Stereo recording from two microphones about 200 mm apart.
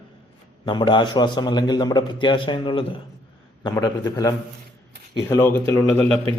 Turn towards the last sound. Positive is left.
turn(degrees=10)  # may be behind; listen again after turning